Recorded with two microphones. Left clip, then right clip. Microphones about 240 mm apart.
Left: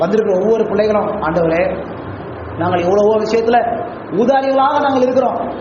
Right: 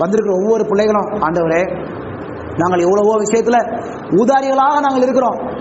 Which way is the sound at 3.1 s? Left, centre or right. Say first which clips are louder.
Even; right.